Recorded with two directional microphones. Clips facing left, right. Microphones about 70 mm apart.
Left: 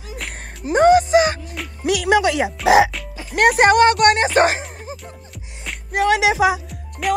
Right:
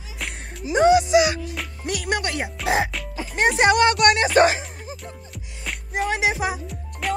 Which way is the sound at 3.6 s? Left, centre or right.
Left.